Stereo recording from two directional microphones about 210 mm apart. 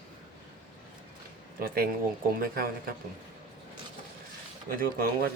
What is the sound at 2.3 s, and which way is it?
Speech, 45° right (ahead or behind).